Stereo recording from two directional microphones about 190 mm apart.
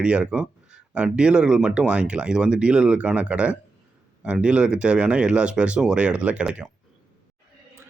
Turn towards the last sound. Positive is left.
turn(degrees=-5)  # may be behind; listen again after turning